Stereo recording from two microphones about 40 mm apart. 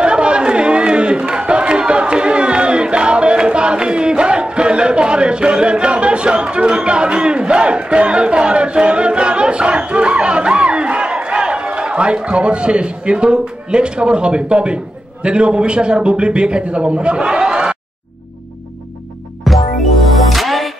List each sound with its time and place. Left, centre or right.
0.0 s chatter: right
15.2 s a man's voice: right
19.4 s music: centre